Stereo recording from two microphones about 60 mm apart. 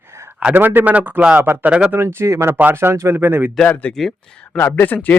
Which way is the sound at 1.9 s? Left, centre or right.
Right.